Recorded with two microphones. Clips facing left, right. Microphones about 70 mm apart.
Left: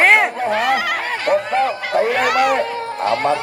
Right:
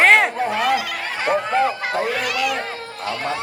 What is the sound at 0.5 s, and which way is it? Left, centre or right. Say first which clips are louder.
Speech: left 3 dB; left.